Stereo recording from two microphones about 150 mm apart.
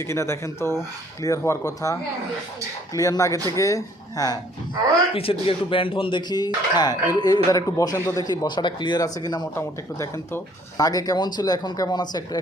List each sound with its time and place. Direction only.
0.0 s speech: 20° left (ahead or behind)
5.1 s speech: 40° left (ahead or behind)